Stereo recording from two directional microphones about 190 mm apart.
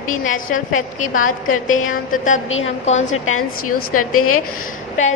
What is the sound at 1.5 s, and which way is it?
Mantra, 90° left.